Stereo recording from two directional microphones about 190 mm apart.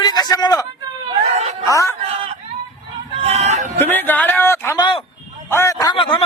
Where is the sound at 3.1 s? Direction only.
35° right (ahead or behind).